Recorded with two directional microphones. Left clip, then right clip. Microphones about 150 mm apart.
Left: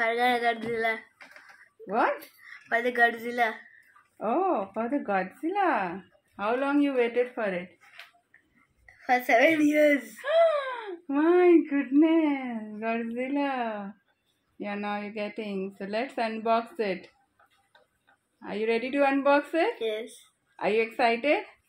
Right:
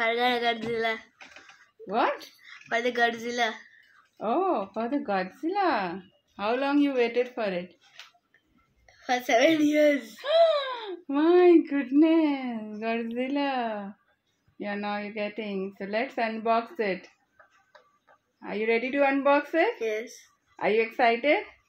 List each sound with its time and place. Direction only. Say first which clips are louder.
0.0 s speech: even; 15° right (ahead or behind)
1.9 s speech: even; centre (ahead or behind)
9.1 s speech: left 1 dB; 10° right (ahead or behind)
18.4 s speech: right 1 dB; 5° right (ahead or behind)